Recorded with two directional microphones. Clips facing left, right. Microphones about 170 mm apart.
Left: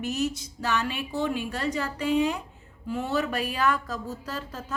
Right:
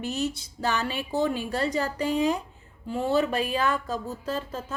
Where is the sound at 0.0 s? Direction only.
30° right (ahead or behind).